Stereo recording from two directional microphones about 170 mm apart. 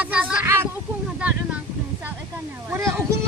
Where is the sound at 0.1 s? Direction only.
5° right (ahead or behind).